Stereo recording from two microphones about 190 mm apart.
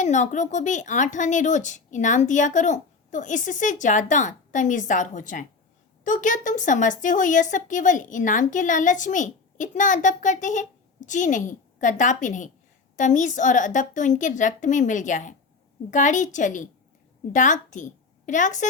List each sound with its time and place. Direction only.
0.0 s a woman's voice: 40° left (ahead or behind)